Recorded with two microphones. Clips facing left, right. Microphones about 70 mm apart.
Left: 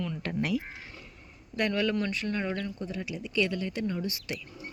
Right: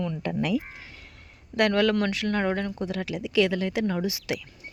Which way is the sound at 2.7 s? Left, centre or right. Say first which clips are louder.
Right 5 dB; right.